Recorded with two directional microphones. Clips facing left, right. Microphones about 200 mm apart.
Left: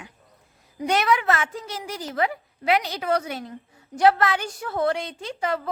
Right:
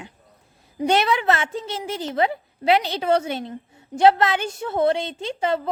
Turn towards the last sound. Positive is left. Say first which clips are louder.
# right 4 dB
turn(degrees=-25)  # may be behind; listen again after turning